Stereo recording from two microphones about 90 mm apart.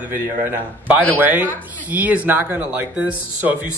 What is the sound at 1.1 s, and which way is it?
Speech, 20° right (ahead or behind).